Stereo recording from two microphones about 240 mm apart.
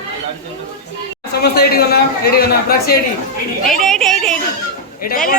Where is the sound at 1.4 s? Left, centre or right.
Left.